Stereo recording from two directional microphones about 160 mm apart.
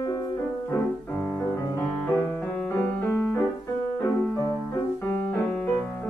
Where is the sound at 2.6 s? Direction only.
15° left (ahead or behind).